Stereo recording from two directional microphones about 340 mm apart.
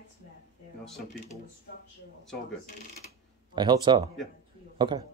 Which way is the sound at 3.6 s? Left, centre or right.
Centre.